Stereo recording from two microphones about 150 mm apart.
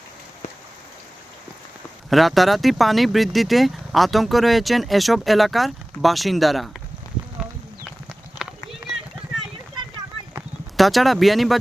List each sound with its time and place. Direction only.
2.0 s speech: centre (ahead or behind)
8.4 s run: 30° left (ahead or behind)
10.8 s speech: centre (ahead or behind)